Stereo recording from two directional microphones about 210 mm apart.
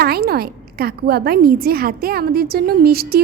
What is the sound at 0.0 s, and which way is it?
A woman's voice, 45° right (ahead or behind).